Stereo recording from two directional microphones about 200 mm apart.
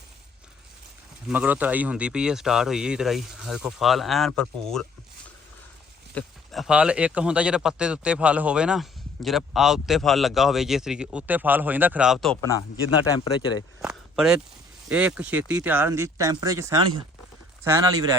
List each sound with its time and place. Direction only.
1.3 s speech: 5° right (ahead or behind)
6.1 s speech: centre (ahead or behind)
13.4 s speech: 20° left (ahead or behind)
13.8 s a sound: 5° right (ahead or behind)
14.8 s speech: 5° right (ahead or behind)